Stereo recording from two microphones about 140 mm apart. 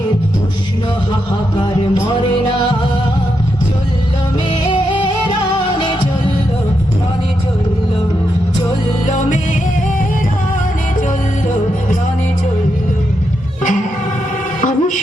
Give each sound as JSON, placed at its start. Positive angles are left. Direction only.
{"t": 9.0, "sound": "music", "side_deg": 60}
{"t": 14.6, "sound": "music", "side_deg": 65}